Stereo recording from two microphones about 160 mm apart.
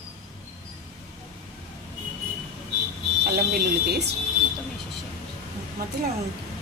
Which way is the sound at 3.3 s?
80° right.